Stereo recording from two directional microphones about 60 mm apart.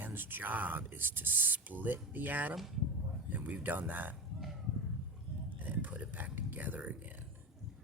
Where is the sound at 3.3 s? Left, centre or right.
Right.